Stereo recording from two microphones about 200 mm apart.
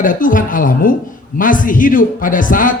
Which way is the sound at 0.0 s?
40° left (ahead or behind).